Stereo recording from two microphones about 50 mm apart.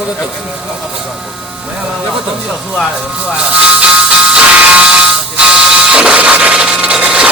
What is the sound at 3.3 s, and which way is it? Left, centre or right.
Music, right.